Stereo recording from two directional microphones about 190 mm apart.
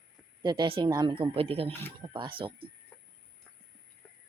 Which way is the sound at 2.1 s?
25° right (ahead or behind).